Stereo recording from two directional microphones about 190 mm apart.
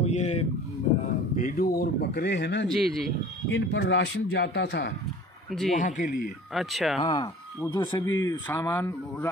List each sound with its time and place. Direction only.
0.0 s a sound: 35° left (ahead or behind)
1.3 s speech: 45° left (ahead or behind); by 2.7 s 65° left (ahead or behind)
2.7 s speech: centre (ahead or behind)
3.4 s speech: 75° left (ahead or behind)
5.5 s speech: centre (ahead or behind)
5.8 s speech: 45° left (ahead or behind)
6.5 s speech: centre (ahead or behind)
7.0 s speech: 25° left (ahead or behind)